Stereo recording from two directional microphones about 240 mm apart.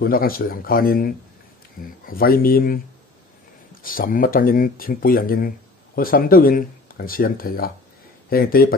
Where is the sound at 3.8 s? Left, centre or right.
Left.